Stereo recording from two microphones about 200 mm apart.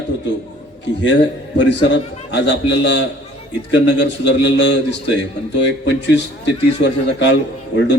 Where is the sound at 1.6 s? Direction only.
60° left (ahead or behind).